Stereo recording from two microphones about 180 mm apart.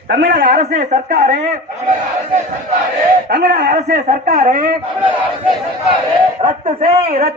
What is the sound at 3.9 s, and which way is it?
Speech, 55° right (ahead or behind).